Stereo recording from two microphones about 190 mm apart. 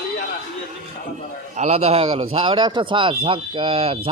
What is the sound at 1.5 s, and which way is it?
Speech, 35° right (ahead or behind).